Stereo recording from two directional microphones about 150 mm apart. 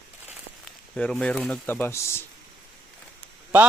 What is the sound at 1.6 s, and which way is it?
Speech, 15° left (ahead or behind).